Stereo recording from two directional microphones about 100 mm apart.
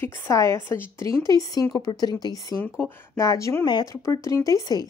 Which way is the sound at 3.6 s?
45° left (ahead or behind).